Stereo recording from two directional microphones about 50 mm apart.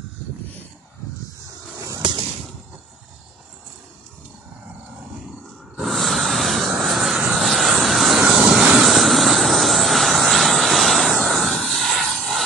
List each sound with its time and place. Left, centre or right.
5.8 s vehicle: centre
8.2 s vehicle: centre
8.8 s vehicle: centre